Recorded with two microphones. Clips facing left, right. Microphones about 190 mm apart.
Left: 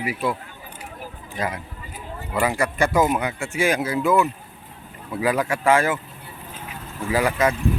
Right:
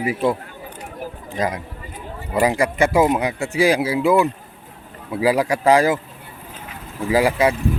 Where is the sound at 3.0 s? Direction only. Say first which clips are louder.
Right 3 dB; 30° right (ahead or behind).